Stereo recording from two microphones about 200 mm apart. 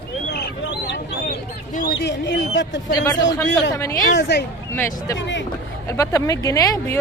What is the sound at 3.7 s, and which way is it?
Speech, 15° left (ahead or behind).